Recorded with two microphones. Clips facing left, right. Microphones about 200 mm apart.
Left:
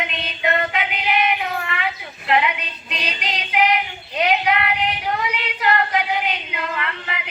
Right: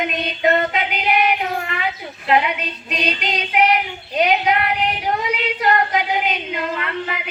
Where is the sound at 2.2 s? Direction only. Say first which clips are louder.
Right 2 dB; 40° right (ahead or behind).